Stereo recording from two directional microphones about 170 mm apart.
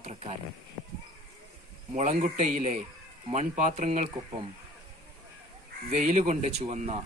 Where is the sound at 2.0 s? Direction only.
45° right (ahead or behind).